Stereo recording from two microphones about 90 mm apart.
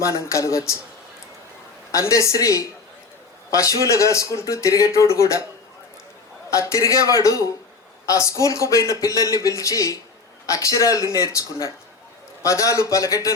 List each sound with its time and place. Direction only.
0.0 s speech: 35° left (ahead or behind)
1.9 s speech: 35° left (ahead or behind)
6.5 s speech: 35° left (ahead or behind)